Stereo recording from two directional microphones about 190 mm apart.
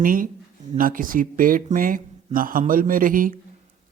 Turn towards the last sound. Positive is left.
turn(degrees=-45)  # may be behind; listen again after turning